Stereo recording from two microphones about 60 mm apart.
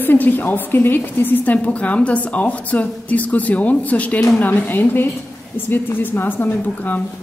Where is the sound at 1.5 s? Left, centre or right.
Left.